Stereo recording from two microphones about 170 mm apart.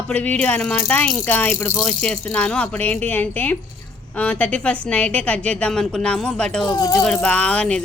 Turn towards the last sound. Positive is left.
turn(degrees=5)  # may be behind; listen again after turning